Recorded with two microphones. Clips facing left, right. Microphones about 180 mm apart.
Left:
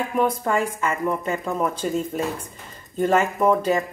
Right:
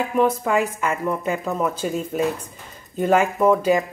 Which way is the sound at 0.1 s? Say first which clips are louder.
Right 2 dB; centre (ahead or behind).